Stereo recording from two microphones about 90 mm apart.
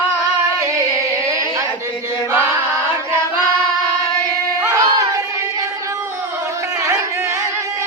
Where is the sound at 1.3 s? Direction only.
35° right (ahead or behind).